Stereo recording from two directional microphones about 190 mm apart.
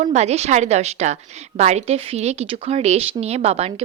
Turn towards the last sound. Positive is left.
turn(degrees=-35)  # may be behind; listen again after turning